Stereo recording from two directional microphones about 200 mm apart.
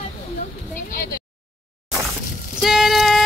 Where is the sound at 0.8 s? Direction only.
45° left (ahead or behind).